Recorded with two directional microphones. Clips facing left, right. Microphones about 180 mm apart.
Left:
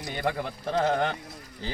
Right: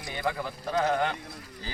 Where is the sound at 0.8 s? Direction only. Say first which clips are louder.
Left 1 dB; 25° left (ahead or behind).